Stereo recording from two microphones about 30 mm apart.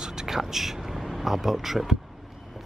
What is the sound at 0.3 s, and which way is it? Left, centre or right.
Speech, centre.